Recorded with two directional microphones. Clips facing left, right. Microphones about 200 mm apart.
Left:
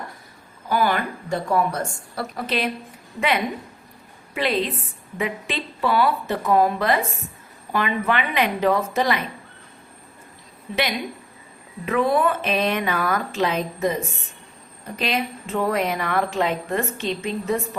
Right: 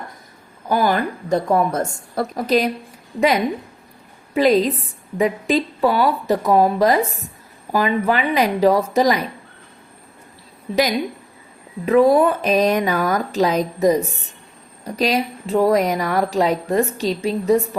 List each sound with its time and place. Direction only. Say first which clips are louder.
0.7 s a woman's voice: right 3 dB; 40° right (ahead or behind)
11.9 s a woman's voice: right 7 dB; 40° right (ahead or behind)